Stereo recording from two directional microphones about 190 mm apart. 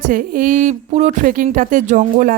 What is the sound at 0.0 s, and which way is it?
A woman's voice, 45° right (ahead or behind).